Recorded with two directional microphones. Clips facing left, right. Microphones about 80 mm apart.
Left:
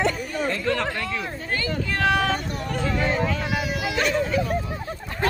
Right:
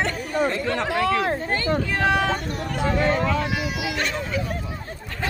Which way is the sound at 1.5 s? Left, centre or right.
Right.